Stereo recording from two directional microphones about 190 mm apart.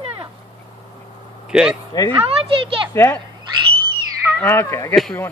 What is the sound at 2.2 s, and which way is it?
Speech, 30° right (ahead or behind).